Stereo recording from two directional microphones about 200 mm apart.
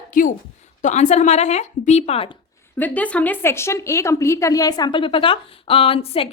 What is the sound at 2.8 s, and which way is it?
A woman's voice, 10° left (ahead or behind).